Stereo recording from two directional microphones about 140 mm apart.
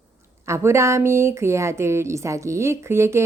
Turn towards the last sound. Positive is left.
turn(degrees=-20)  # may be behind; listen again after turning